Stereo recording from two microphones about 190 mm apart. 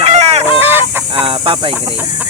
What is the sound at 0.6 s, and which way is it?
Fowl, 10° right (ahead or behind).